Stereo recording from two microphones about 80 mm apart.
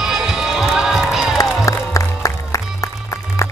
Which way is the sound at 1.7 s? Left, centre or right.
Left.